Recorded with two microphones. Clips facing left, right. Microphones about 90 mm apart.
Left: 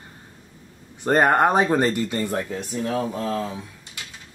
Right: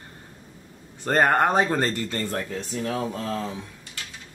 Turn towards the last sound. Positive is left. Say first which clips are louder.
# left 3 dB
turn(degrees=5)  # may be behind; listen again after turning